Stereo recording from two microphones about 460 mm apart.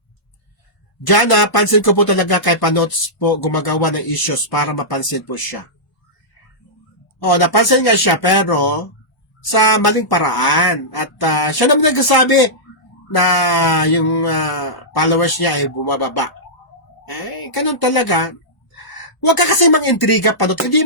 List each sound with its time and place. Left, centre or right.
1.0 s speech: left
7.2 s speech: left
19.2 s speech: left